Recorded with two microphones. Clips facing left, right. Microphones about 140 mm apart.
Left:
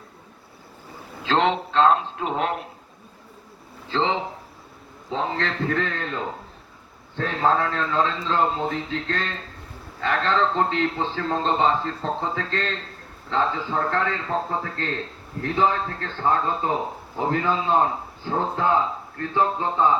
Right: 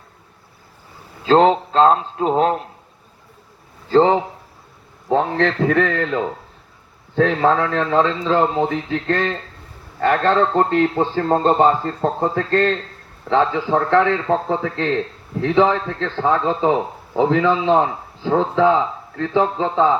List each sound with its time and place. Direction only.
1.2 s a man's voice: 35° right (ahead or behind)
3.8 s a man's voice: 45° right (ahead or behind)
5.0 s a man's voice: 60° right (ahead or behind)
13.2 s a man's voice: 70° right (ahead or behind); by 19.9 s 90° right